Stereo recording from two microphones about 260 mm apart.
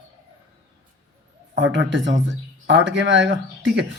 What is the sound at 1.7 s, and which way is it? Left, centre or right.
Speech, right.